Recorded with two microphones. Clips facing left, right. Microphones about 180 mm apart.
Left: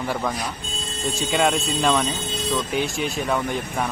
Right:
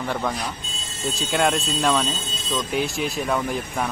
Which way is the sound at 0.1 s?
Centre (ahead or behind).